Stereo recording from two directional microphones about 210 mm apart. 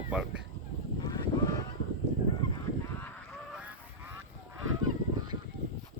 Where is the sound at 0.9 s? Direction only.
20° left (ahead or behind).